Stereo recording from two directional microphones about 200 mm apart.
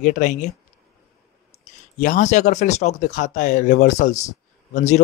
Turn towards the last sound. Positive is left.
turn(degrees=35)  # may be behind; listen again after turning